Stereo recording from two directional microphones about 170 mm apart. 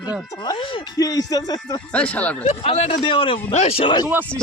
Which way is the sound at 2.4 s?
35° left (ahead or behind).